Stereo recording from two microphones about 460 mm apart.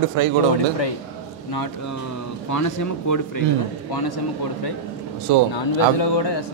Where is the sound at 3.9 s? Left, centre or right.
Left.